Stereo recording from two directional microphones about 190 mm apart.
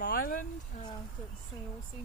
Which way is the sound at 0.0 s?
45° left (ahead or behind).